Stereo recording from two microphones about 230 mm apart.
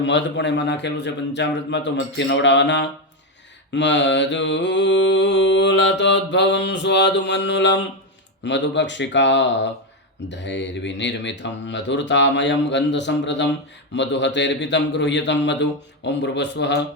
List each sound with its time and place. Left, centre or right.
0.0 s speech: left